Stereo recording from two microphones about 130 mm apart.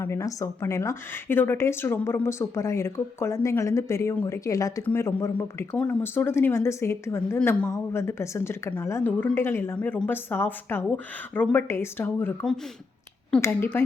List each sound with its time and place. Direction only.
0.0 s a woman's voice: 20° left (ahead or behind)